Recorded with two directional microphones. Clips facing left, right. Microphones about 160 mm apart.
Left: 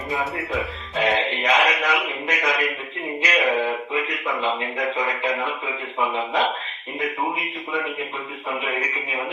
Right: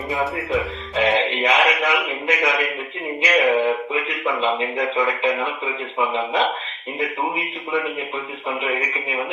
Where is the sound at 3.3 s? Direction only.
Centre (ahead or behind).